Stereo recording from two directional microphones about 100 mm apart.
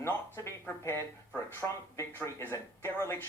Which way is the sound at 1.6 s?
10° left (ahead or behind).